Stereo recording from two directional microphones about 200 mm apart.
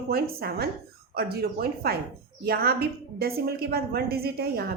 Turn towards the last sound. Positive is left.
turn(degrees=-50)  # may be behind; listen again after turning